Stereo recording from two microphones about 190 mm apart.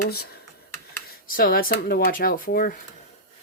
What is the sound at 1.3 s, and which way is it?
Speech, 50° left (ahead or behind).